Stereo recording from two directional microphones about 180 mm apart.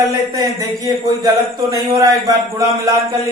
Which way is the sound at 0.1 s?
20° right (ahead or behind).